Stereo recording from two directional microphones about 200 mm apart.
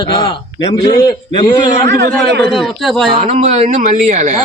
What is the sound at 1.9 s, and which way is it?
Speech, 55° right (ahead or behind).